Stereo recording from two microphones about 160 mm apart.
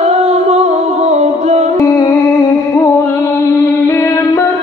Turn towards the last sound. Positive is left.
turn(degrees=20)  # may be behind; listen again after turning